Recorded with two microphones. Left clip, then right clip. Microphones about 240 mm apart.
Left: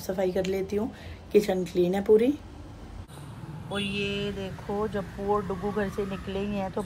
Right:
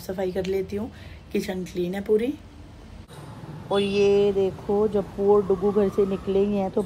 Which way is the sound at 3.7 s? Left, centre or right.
Centre.